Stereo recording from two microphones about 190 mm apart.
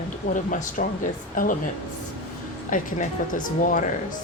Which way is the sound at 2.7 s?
45° left (ahead or behind).